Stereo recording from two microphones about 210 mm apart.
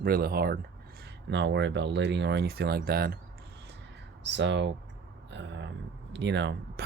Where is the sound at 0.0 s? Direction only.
45° right (ahead or behind).